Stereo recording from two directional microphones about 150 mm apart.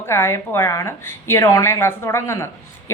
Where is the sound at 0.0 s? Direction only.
15° left (ahead or behind).